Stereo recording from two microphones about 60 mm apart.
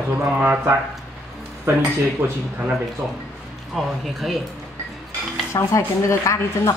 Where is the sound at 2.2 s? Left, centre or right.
Right.